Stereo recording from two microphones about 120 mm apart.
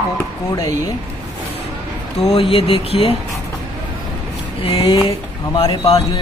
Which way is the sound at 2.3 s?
50° left (ahead or behind).